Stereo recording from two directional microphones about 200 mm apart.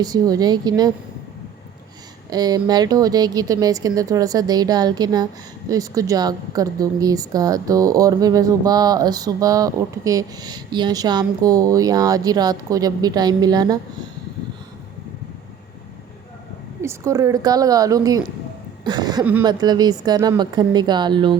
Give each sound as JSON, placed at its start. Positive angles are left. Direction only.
{"t": 0.0, "sound": "speech", "side_deg": -20}
{"t": 2.3, "sound": "speech", "side_deg": -20}
{"t": 16.8, "sound": "speech", "side_deg": -15}
{"t": 19.2, "sound": "speech", "side_deg": -10}
{"t": 19.5, "sound": "speech", "side_deg": -20}